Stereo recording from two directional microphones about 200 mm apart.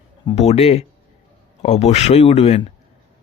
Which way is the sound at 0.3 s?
30° left (ahead or behind).